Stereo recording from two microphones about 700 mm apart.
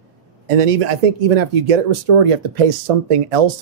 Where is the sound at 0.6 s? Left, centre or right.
Right.